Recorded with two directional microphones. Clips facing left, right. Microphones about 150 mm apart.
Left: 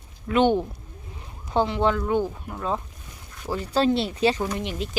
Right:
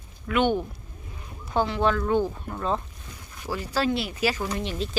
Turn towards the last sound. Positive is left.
turn(degrees=15)  # may be behind; listen again after turning